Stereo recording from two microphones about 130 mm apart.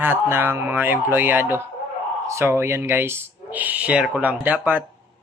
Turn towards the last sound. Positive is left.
turn(degrees=-15)  # may be behind; listen again after turning